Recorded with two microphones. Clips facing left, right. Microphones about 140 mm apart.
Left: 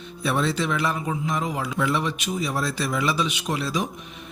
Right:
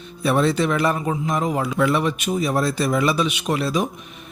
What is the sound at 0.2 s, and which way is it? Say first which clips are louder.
A man's voice: right 5 dB; 50° right (ahead or behind).